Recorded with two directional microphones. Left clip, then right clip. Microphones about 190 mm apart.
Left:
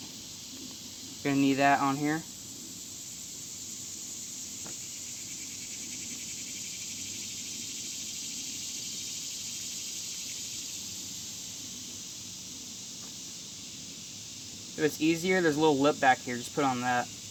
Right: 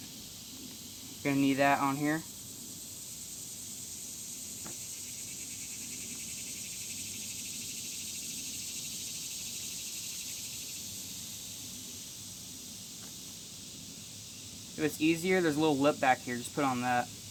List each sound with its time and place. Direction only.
1.2 s speech: 20° left (ahead or behind)
14.8 s speech: 20° left (ahead or behind)